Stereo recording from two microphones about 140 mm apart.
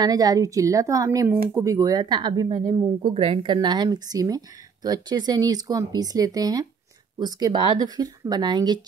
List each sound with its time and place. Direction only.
0.0 s speech: 25° right (ahead or behind)